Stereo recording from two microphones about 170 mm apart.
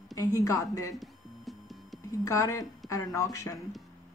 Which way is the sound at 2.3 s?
20° left (ahead or behind).